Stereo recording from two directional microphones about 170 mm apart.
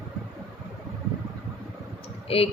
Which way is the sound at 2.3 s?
35° left (ahead or behind).